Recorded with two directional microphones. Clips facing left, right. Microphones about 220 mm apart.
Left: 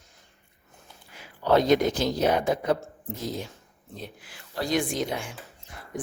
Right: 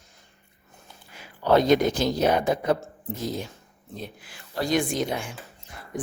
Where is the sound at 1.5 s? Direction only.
50° right (ahead or behind).